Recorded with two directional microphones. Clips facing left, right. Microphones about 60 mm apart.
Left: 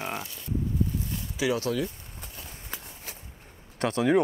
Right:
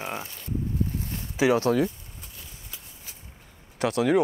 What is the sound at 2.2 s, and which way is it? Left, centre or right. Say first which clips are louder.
Walk: left 3 dB; left.